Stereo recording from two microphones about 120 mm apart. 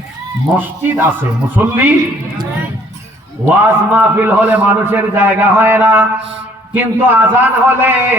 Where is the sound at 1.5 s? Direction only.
15° right (ahead or behind).